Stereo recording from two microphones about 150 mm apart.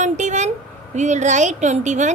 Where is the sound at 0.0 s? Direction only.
55° right (ahead or behind).